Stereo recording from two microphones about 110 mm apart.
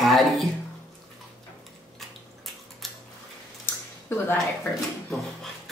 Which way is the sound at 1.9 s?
Centre (ahead or behind).